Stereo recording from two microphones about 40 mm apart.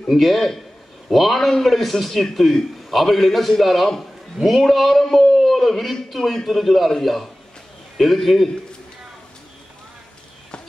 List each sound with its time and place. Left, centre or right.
0.1 s a man's voice: centre